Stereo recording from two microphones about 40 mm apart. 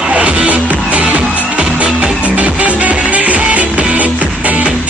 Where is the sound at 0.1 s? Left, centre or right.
Right.